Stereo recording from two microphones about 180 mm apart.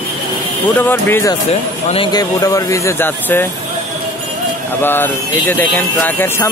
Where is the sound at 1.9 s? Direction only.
25° left (ahead or behind).